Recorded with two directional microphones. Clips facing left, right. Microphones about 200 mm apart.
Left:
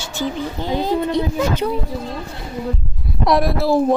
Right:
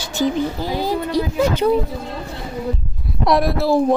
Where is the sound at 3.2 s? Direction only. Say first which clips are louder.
Even; centre (ahead or behind).